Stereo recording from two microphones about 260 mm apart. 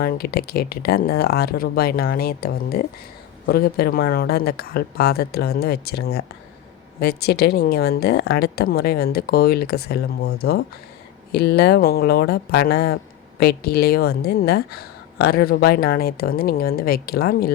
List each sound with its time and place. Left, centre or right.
0.0 s a woman's voice: left